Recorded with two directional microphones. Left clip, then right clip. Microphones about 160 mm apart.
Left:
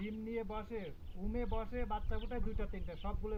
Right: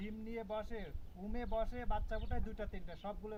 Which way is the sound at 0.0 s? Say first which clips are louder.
Left 4 dB; 20° right (ahead or behind).